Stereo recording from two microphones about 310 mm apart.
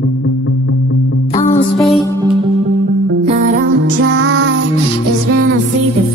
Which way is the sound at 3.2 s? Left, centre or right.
Right.